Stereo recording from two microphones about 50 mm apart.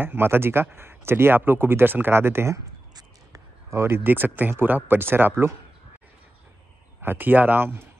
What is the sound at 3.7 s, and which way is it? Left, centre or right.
Speech, right.